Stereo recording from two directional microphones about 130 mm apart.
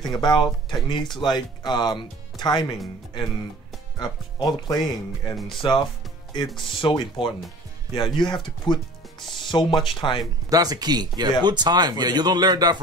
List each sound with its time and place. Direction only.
0.1 s speech: 35° left (ahead or behind)
4.0 s speech: 30° left (ahead or behind)
10.5 s speech: 30° right (ahead or behind)